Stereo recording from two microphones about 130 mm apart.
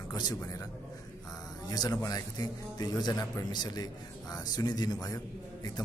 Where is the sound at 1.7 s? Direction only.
30° left (ahead or behind).